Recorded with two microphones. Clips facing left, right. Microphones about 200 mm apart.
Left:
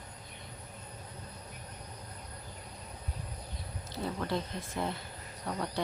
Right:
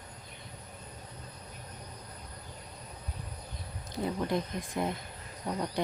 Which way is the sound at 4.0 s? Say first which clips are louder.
Right 3 dB; 15° right (ahead or behind).